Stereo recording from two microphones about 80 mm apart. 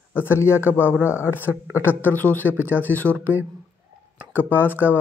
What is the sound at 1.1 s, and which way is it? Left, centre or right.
Speech, left.